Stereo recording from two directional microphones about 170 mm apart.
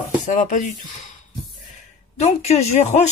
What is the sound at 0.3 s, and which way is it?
Speech, 45° left (ahead or behind).